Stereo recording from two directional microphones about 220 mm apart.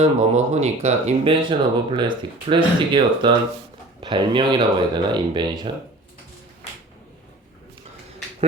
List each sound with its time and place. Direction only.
0.0 s speech: 30° right (ahead or behind)